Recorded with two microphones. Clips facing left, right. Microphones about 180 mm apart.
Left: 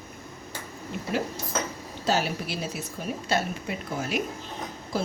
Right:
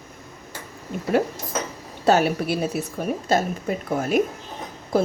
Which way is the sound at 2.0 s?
60° right (ahead or behind).